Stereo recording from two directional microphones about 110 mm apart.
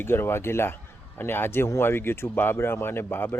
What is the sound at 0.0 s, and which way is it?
Speech, 20° left (ahead or behind).